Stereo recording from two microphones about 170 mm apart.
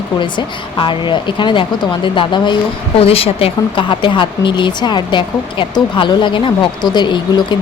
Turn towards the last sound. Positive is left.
turn(degrees=25)  # may be behind; listen again after turning